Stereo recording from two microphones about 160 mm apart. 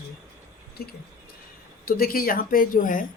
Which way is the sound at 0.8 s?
75° left (ahead or behind).